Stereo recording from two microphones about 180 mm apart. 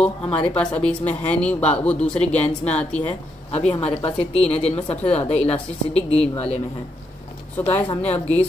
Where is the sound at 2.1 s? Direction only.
35° left (ahead or behind).